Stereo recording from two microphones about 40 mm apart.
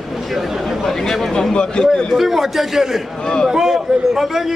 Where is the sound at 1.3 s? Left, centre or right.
Left.